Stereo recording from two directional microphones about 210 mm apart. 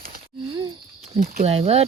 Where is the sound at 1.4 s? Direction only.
30° right (ahead or behind).